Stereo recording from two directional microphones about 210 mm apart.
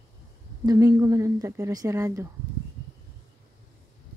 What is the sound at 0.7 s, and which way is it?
Speech, 20° right (ahead or behind).